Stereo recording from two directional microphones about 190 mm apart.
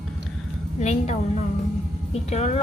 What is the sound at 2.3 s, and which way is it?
Speech, 35° left (ahead or behind).